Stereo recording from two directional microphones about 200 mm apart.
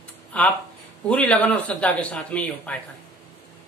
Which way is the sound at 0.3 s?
5° left (ahead or behind).